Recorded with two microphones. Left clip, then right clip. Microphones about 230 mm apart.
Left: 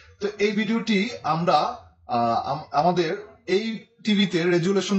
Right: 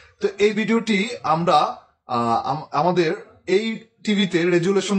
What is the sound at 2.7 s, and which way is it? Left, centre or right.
Speech, right.